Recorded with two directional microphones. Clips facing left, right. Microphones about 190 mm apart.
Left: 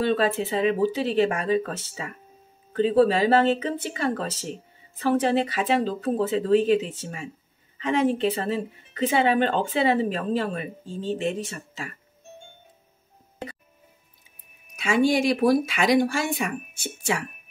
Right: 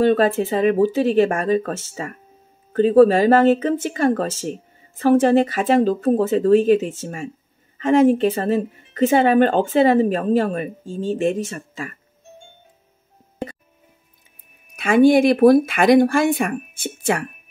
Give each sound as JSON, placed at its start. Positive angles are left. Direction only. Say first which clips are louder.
{"t": 0.0, "sound": "speech", "louder": "right 7 dB", "side_deg": -50}
{"t": 14.8, "sound": "speech", "louder": "right 8 dB", "side_deg": -55}